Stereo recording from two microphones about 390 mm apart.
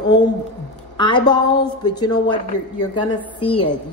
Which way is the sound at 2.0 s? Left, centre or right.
Centre.